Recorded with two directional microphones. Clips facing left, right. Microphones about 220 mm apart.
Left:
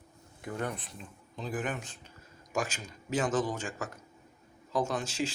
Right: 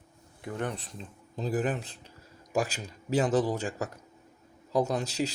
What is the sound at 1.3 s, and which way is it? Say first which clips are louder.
A man's voice: right 5 dB; 40° right (ahead or behind).